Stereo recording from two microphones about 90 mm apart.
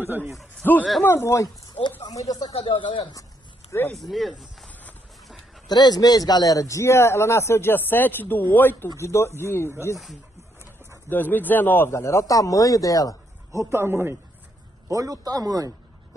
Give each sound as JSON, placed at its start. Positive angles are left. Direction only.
{"t": 0.0, "sound": "a man's voice", "side_deg": -20}
{"t": 0.6, "sound": "speech", "side_deg": 20}
{"t": 1.8, "sound": "speech", "side_deg": 55}
{"t": 2.1, "sound": "speech", "side_deg": 45}
{"t": 2.6, "sound": "speech", "side_deg": 65}
{"t": 3.7, "sound": "a man's voice", "side_deg": 30}
{"t": 4.1, "sound": "speech", "side_deg": 0}
{"t": 5.7, "sound": "a man's voice", "side_deg": 50}
{"t": 8.8, "sound": "a man's voice", "side_deg": 30}
{"t": 11.1, "sound": "a man's voice", "side_deg": 20}
{"t": 13.5, "sound": "a man's voice", "side_deg": -35}
{"t": 14.9, "sound": "a man's voice", "side_deg": -40}